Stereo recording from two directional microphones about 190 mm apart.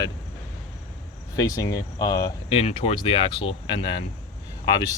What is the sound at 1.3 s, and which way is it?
Speech, 20° left (ahead or behind).